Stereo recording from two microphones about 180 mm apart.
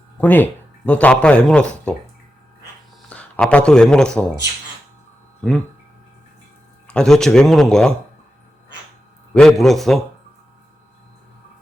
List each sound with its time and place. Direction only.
0.2 s speech: 10° left (ahead or behind)
3.1 s speech: 5° left (ahead or behind)
6.8 s speech: 5° left (ahead or behind)
9.3 s speech: centre (ahead or behind)